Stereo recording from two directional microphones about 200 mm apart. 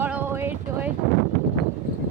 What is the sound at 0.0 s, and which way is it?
Vehicle, 10° right (ahead or behind).